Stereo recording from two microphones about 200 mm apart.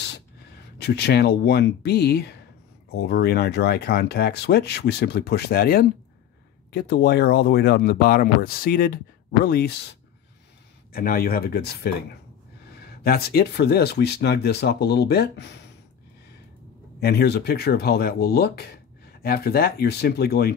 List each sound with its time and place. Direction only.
0.0 s speech: 55° left (ahead or behind)
13.0 s speech: 50° left (ahead or behind)
17.0 s speech: 55° left (ahead or behind)